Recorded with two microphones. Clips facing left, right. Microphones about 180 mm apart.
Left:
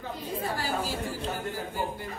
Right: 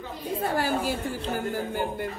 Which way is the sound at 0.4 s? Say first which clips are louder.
Right 6 dB; 60° right (ahead or behind).